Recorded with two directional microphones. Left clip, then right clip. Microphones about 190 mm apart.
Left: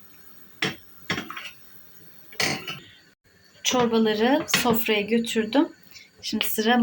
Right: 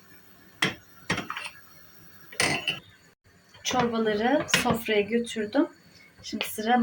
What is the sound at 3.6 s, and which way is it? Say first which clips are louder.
Speech: left 4 dB; 20° left (ahead or behind).